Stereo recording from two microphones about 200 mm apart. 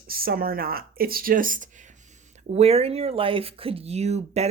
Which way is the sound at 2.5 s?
30° right (ahead or behind).